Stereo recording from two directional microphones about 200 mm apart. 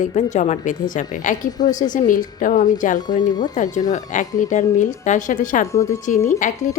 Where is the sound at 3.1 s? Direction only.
20° left (ahead or behind).